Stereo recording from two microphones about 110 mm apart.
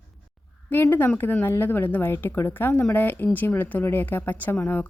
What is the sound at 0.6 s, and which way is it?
A woman's voice, 20° left (ahead or behind).